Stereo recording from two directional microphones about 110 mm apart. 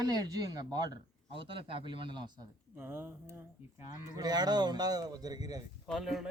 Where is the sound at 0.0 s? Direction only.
35° right (ahead or behind).